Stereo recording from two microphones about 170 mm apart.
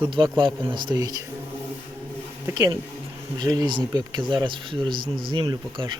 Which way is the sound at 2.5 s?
20° right (ahead or behind).